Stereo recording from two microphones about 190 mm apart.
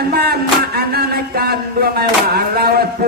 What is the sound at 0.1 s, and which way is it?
Music, 55° right (ahead or behind).